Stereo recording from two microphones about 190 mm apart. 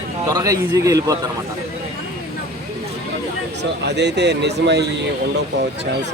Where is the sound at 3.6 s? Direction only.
60° right (ahead or behind).